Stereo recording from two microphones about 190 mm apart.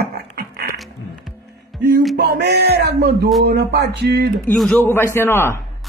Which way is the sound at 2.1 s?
60° right (ahead or behind).